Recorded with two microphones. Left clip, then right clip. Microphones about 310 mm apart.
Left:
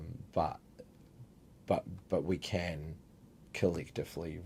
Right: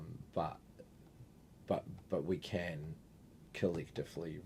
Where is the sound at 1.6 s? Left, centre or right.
Left.